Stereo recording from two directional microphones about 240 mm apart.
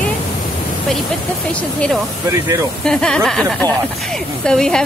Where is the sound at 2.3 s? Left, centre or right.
Centre.